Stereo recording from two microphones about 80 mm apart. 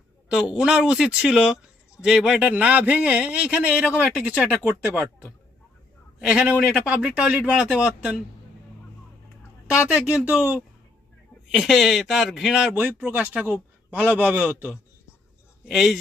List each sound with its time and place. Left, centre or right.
0.3 s a man's voice: centre
6.1 s a man's voice: centre
9.6 s a man's voice: centre
11.5 s speech: centre
12.7 s a man's voice: right
15.6 s speech: centre